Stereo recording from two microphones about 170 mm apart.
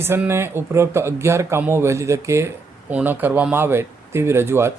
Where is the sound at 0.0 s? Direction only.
15° right (ahead or behind).